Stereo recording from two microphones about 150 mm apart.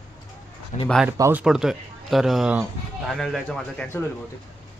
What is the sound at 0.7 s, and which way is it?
Speech, 55° left (ahead or behind).